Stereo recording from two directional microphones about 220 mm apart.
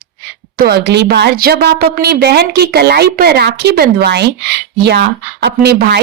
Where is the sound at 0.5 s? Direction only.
45° right (ahead or behind).